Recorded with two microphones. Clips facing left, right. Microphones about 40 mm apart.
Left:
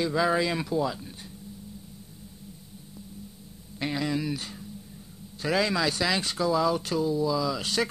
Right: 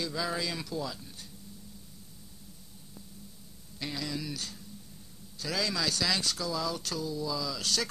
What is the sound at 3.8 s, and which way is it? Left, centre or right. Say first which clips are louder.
A man's voice: left 8 dB; left.